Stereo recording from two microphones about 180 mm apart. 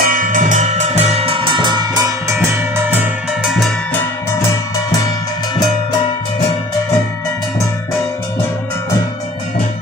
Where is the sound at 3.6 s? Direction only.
10° left (ahead or behind).